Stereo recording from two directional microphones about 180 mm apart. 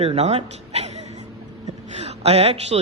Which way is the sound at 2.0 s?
35° right (ahead or behind).